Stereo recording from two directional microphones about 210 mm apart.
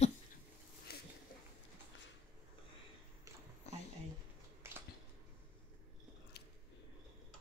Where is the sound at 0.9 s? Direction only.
50° left (ahead or behind).